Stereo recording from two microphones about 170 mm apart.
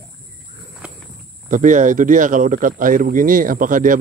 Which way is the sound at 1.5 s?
50° right (ahead or behind).